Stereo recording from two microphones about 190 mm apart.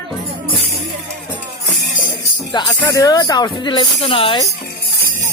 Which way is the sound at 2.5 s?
20° left (ahead or behind).